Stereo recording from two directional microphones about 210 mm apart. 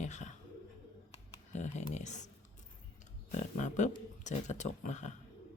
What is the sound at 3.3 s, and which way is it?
Speech, 35° left (ahead or behind).